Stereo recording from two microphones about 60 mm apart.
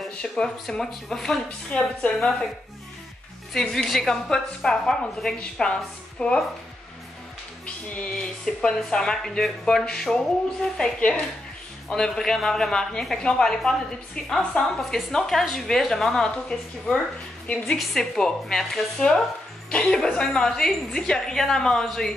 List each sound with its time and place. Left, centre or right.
0.2 s a woman's voice: centre
1.7 s a woman's voice: centre
3.5 s a woman's voice: centre
7.6 s music: centre
8.1 s a woman's voice: centre